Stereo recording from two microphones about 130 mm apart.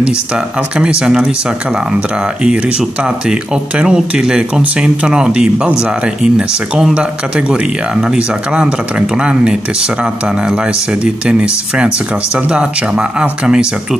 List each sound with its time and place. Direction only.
0.7 s speech: 10° right (ahead or behind)
2.4 s speech: 5° right (ahead or behind)